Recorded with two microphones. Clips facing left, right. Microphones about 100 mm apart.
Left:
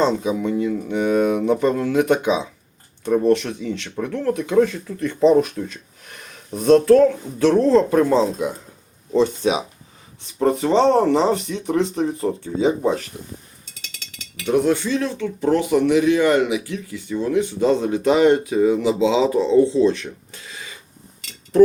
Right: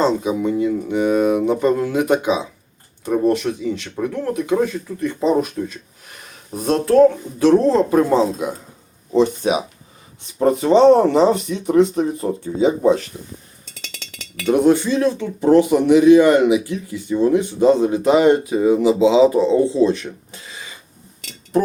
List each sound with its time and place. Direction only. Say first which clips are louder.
0.0 s speech: right 2 dB; 5° right (ahead or behind)
7.3 s speech: left 1 dB; 15° right (ahead or behind)
10.3 s speech: right 3 dB; 15° right (ahead or behind)
14.4 s speech: right 4 dB; 20° right (ahead or behind); by 20.7 s centre (ahead or behind)